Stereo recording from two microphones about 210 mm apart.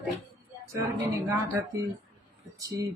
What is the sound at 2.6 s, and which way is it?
Speech, 15° right (ahead or behind).